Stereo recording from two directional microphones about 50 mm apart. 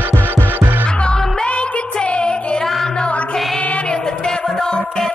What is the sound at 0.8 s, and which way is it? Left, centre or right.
Music, centre.